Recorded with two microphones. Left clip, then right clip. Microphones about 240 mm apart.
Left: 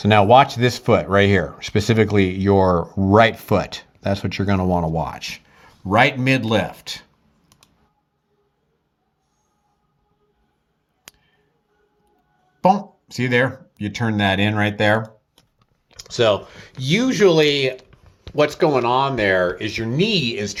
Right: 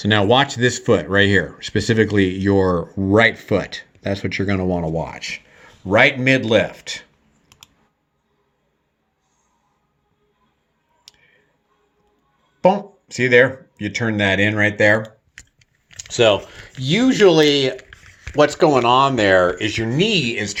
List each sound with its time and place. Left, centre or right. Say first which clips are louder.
0.0 s speech: left 3 dB; left
5.9 s speech: right 2 dB; left
12.6 s speech: right 1 dB; left
14.3 s speech: right 4 dB; left
15.9 s speech: right 2 dB; centre